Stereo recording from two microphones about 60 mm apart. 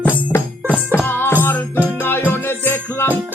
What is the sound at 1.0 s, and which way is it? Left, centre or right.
Music, left.